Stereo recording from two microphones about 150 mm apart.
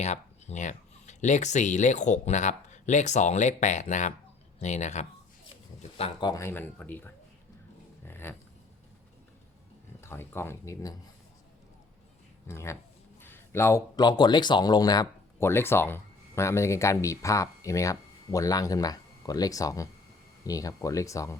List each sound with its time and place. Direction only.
0.0 s speech: 50° left (ahead or behind)
6.0 s speech: 30° left (ahead or behind); by 7.1 s 10° left (ahead or behind)
8.0 s a sound: 15° left (ahead or behind)
10.0 s speech: 15° left (ahead or behind)
12.5 s speech: 20° left (ahead or behind)